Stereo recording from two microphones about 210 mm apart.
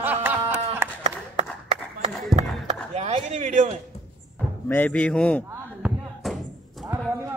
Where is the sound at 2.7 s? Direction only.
30° right (ahead or behind).